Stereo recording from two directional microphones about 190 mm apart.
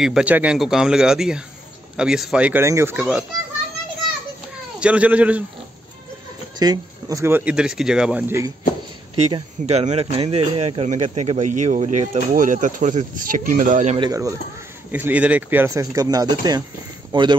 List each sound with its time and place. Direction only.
0.0 s speech: 5° right (ahead or behind)
4.7 s speech: 5° right (ahead or behind)
6.6 s speech: 20° right (ahead or behind)
9.3 s speech: 35° right (ahead or behind)
13.9 s speech: 20° right (ahead or behind)
14.9 s speech: 10° right (ahead or behind)